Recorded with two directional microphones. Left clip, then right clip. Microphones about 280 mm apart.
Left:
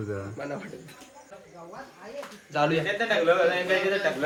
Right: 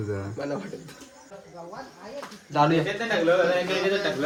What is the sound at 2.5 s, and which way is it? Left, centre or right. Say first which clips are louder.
Speech: right 3 dB; right.